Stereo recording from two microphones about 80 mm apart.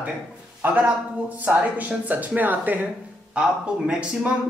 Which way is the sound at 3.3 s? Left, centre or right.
Centre.